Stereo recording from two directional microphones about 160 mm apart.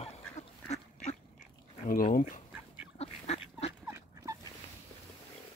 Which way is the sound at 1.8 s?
60° left (ahead or behind).